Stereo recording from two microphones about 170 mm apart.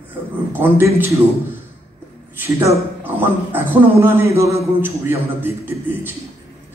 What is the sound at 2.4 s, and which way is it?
A man's voice, 10° right (ahead or behind).